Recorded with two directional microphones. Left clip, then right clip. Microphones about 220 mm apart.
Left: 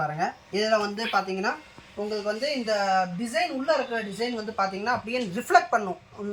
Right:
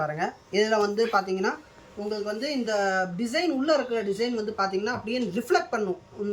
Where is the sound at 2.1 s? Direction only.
20° left (ahead or behind).